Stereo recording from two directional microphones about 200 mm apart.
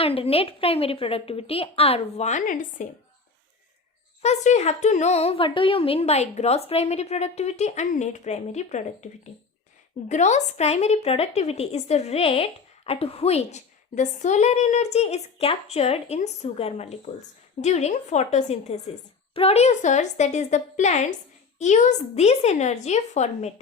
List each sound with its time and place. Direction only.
0.0 s a woman's voice: 30° left (ahead or behind)
4.2 s a woman's voice: 35° left (ahead or behind)
10.1 s a woman's voice: 35° left (ahead or behind)